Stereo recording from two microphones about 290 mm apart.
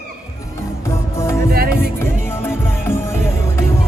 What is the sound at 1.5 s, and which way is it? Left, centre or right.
Music, right.